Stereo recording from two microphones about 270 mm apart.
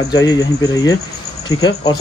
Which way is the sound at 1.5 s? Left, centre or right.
Centre.